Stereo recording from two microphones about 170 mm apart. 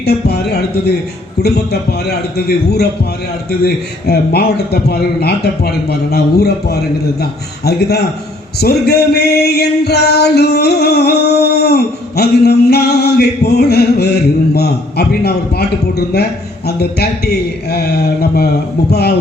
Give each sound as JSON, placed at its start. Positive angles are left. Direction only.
{"t": 0.0, "sound": "speech", "side_deg": 70}